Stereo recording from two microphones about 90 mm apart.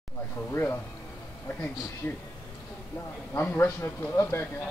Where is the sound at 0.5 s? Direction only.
25° left (ahead or behind).